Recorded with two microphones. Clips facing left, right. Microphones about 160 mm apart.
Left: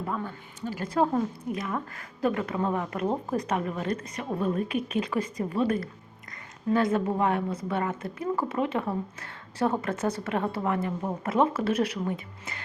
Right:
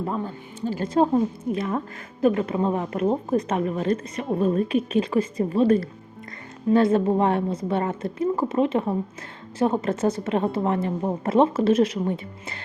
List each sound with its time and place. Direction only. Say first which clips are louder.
0.0 s a woman's voice: right 5 dB; 30° right (ahead or behind)